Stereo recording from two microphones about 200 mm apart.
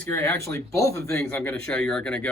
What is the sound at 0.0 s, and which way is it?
Speech, 10° left (ahead or behind).